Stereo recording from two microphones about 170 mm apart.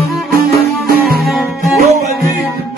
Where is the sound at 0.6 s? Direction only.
65° right (ahead or behind).